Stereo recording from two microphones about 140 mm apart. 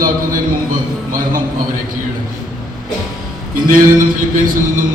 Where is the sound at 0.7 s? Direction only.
75° right (ahead or behind).